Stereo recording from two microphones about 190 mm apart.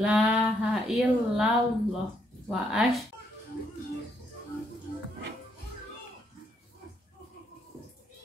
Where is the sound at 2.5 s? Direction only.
5° right (ahead or behind).